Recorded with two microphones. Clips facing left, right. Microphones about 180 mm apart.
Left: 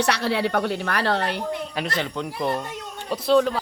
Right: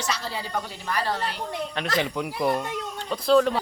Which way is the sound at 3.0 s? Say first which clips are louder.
Left 1 dB; 5° left (ahead or behind).